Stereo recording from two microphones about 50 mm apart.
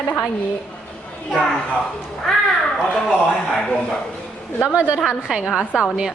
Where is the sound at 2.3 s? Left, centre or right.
Centre.